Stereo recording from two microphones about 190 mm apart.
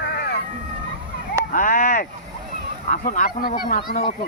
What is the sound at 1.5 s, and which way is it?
Speech, 45° left (ahead or behind).